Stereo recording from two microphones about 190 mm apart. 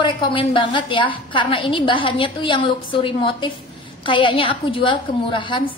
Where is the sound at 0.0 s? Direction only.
25° left (ahead or behind).